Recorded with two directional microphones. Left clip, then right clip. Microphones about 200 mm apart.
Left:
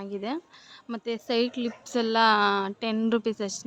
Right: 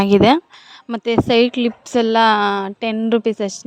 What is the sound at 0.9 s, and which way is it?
A woman's voice, 45° right (ahead or behind).